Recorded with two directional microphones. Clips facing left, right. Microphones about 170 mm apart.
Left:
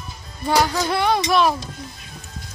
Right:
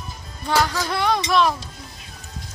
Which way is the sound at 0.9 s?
5° left (ahead or behind).